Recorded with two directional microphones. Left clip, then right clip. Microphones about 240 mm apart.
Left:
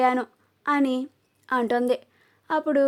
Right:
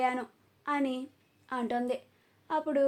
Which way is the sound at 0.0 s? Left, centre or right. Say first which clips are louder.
Left 9 dB; left.